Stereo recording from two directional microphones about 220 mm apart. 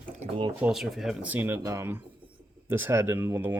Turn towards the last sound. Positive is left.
turn(degrees=-10)  # may be behind; listen again after turning